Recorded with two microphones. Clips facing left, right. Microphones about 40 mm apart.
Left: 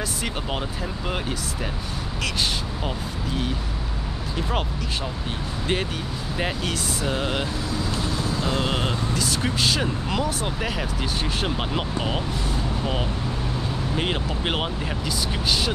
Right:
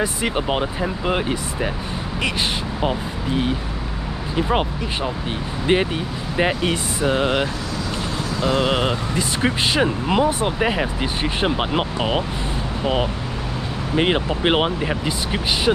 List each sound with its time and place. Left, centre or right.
0.0 s speech: right
2.8 s speech: right
8.4 s speech: right